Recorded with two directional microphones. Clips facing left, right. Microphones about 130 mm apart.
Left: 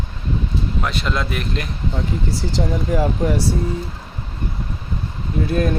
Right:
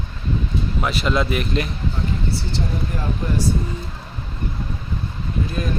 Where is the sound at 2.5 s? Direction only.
90° left.